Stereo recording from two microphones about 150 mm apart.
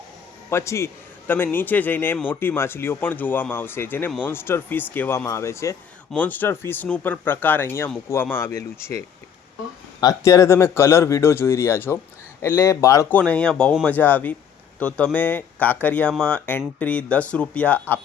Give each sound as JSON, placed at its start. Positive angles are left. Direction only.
{"t": 0.5, "sound": "speech", "side_deg": 20}
{"t": 13.1, "sound": "speech", "side_deg": 10}